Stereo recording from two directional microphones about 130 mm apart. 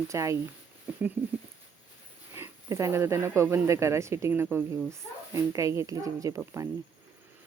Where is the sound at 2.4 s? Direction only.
20° right (ahead or behind).